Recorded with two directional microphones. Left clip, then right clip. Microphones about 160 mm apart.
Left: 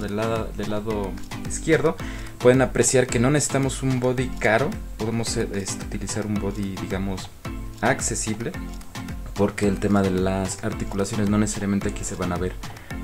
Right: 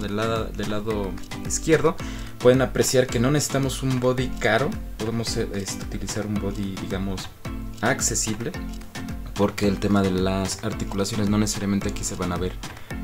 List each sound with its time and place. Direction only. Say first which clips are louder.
0.1 s speech: right 1 dB; centre (ahead or behind)
2.4 s speech: left 1 dB; 15° left (ahead or behind)